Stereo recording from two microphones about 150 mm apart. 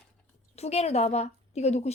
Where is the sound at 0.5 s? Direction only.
45° left (ahead or behind).